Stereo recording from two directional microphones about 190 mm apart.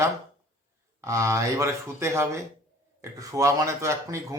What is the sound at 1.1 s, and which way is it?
Speech, 15° right (ahead or behind).